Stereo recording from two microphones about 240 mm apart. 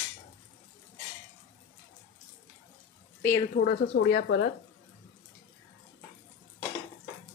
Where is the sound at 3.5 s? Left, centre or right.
Left.